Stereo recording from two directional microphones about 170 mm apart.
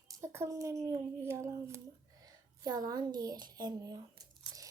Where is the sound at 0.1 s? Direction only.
20° right (ahead or behind).